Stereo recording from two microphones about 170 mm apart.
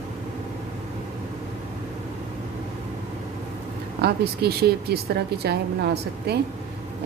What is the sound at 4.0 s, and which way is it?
Speech, 70° right (ahead or behind).